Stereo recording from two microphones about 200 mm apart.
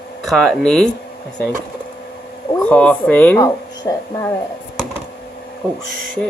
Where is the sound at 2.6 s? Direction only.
5° left (ahead or behind).